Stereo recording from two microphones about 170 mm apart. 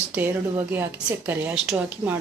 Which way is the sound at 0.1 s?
10° right (ahead or behind).